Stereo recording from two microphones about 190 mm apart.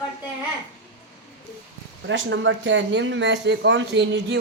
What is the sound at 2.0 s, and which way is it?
Speech, 75° right (ahead or behind).